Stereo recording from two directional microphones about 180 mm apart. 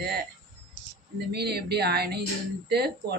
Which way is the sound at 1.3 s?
65° right (ahead or behind).